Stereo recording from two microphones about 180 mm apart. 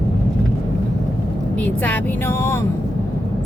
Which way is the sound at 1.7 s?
10° left (ahead or behind).